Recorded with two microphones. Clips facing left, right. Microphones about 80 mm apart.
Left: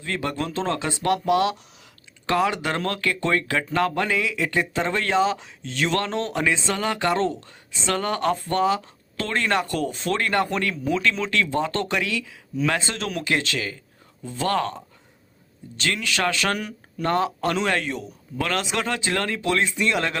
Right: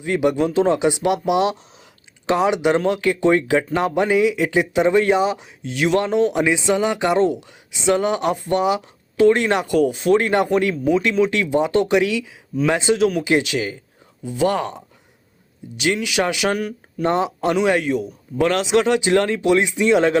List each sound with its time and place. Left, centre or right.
0.0 s speech: centre
9.7 s speech: centre
18.3 s speech: right